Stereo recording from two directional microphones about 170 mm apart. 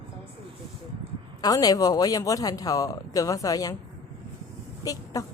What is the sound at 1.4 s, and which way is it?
Speech, 20° left (ahead or behind).